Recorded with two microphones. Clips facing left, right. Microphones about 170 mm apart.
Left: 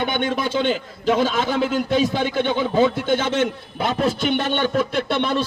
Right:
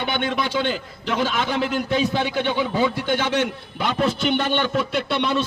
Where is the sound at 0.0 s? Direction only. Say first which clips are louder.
Left 2 dB; 50° left (ahead or behind).